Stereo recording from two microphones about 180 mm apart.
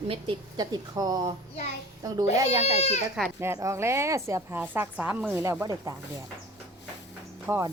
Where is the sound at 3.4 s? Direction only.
15° right (ahead or behind).